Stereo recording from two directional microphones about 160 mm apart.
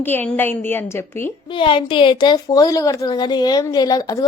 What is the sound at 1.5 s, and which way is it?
A woman's voice, 30° left (ahead or behind).